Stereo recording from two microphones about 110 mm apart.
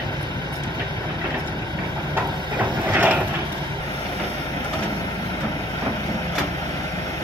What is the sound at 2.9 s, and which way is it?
Vehicle, 15° right (ahead or behind).